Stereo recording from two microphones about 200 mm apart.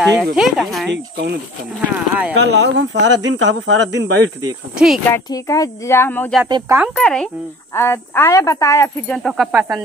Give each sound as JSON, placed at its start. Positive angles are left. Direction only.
{"t": 0.0, "sound": "speech", "side_deg": 0}
{"t": 0.9, "sound": "speech", "side_deg": -55}
{"t": 1.8, "sound": "speech", "side_deg": -5}
{"t": 2.4, "sound": "speech", "side_deg": -60}
{"t": 4.7, "sound": "speech", "side_deg": 0}
{"t": 5.1, "sound": "speech", "side_deg": 15}
{"t": 6.5, "sound": "speech", "side_deg": -15}
{"t": 7.0, "sound": "speech", "side_deg": 5}